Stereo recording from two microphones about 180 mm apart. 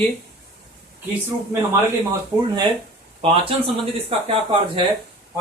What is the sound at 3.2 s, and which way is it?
Speech, 30° right (ahead or behind).